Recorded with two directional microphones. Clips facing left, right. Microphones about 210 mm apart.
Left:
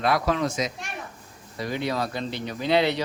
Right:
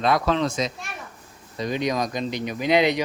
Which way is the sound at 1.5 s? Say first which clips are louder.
Right 3 dB; 20° right (ahead or behind).